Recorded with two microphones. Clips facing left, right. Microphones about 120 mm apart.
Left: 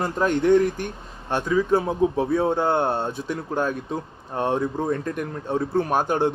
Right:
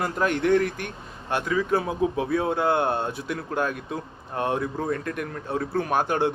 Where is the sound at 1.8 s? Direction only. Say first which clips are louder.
Left 3 dB; 30° left (ahead or behind).